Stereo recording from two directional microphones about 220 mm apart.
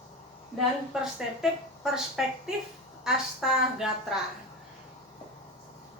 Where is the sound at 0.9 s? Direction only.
Centre (ahead or behind).